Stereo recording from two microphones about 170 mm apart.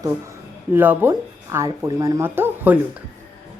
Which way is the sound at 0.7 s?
10° right (ahead or behind).